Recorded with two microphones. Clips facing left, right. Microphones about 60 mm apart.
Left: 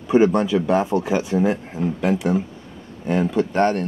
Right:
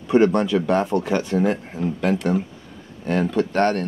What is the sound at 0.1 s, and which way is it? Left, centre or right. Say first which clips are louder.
Speech: left 1 dB; centre.